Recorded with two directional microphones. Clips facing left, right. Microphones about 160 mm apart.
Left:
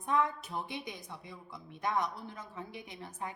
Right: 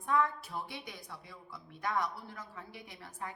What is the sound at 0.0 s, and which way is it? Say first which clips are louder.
A woman's voice: even; 20° left (ahead or behind).